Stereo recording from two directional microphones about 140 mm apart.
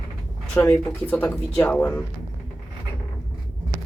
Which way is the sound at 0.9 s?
10° left (ahead or behind).